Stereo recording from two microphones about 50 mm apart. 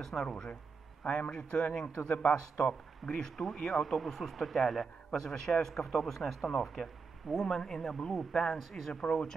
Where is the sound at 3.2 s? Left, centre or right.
Centre.